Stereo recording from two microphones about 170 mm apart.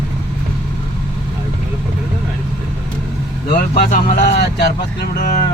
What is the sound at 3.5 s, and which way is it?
Speech, 60° left (ahead or behind).